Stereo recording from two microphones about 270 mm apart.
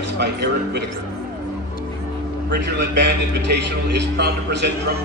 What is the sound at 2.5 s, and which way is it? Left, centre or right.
A man's voice, right.